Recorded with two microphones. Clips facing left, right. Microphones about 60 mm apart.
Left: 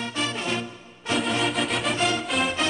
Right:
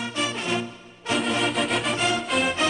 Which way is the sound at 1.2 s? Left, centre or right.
Centre.